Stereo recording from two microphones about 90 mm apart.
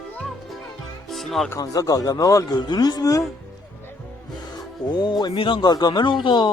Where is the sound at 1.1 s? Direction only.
Centre (ahead or behind).